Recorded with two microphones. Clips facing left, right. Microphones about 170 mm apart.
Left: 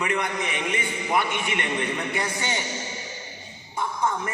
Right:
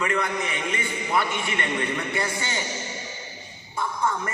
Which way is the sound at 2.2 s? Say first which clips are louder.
Even; 20° left (ahead or behind).